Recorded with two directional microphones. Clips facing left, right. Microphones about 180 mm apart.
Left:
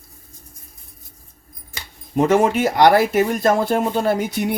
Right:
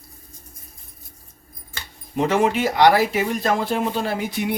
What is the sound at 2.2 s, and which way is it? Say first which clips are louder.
Speech: left 3 dB; 45° left (ahead or behind).